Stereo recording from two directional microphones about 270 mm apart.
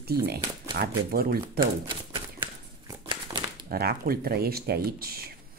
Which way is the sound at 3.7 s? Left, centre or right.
Right.